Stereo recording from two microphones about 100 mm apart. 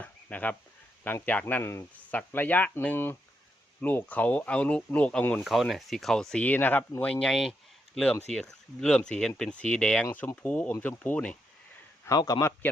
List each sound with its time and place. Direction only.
0.0 s a sound: 15° left (ahead or behind)
1.0 s speech: 15° left (ahead or behind)
5.4 s speech: centre (ahead or behind); by 11.3 s 15° left (ahead or behind)
12.0 s a man's voice: 40° left (ahead or behind)